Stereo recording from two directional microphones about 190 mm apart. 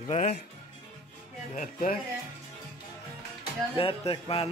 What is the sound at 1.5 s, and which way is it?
Speech, 45° left (ahead or behind).